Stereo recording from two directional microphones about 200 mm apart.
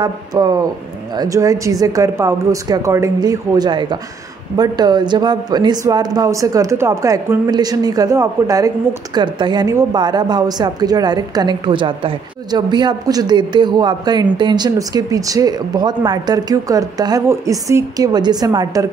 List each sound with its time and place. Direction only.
0.0 s speech: 20° right (ahead or behind)